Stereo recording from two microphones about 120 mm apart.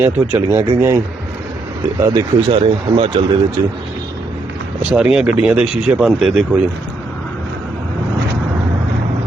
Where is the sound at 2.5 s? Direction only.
45° right (ahead or behind).